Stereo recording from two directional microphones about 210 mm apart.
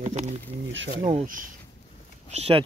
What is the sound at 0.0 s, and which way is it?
Speech, 35° right (ahead or behind).